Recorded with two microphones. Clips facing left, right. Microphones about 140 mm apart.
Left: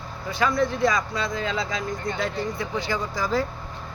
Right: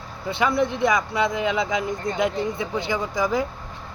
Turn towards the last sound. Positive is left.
turn(degrees=-20)  # may be behind; listen again after turning